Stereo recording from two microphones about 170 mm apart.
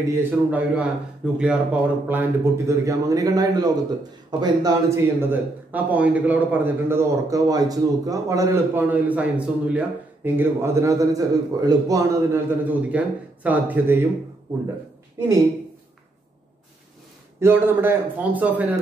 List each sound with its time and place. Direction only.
0.1 s a man's voice: 10° right (ahead or behind)
17.4 s a man's voice: 15° right (ahead or behind)